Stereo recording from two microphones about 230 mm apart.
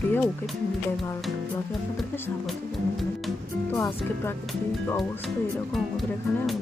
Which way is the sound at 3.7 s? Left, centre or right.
Centre.